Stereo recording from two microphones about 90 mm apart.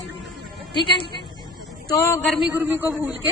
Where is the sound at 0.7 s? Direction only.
60° left (ahead or behind).